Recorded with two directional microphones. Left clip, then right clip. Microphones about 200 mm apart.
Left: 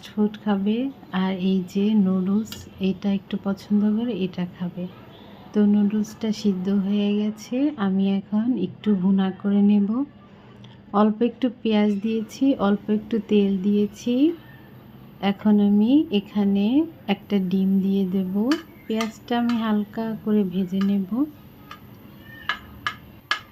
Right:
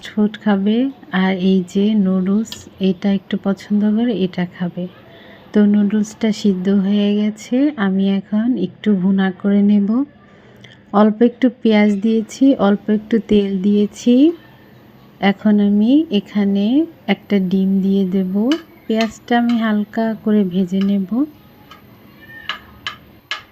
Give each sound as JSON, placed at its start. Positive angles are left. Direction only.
{"t": 0.0, "sound": "speech", "side_deg": -20}